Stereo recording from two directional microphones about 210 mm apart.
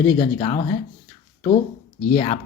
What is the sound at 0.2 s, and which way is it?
Speech, 25° left (ahead or behind).